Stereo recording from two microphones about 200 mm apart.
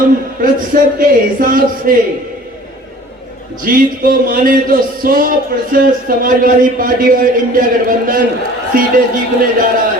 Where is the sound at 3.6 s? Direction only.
45° right (ahead or behind).